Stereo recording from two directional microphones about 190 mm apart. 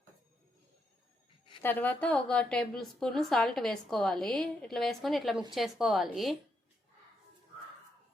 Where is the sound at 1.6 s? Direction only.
10° left (ahead or behind).